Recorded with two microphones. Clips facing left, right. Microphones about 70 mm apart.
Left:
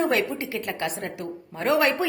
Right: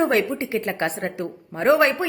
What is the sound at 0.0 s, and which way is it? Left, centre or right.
A woman's voice, right.